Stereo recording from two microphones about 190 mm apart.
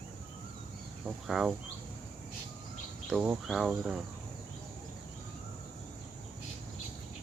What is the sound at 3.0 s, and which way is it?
Speech, 5° right (ahead or behind).